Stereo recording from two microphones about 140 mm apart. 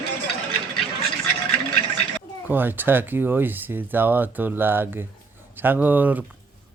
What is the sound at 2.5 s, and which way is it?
Speech, 15° right (ahead or behind).